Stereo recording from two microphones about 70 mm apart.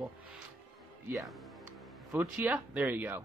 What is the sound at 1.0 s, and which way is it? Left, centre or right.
Speech, right.